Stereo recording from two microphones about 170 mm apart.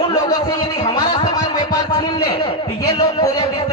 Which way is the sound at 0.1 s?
20° left (ahead or behind).